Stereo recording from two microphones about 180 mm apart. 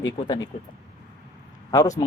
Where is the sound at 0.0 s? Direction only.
20° left (ahead or behind).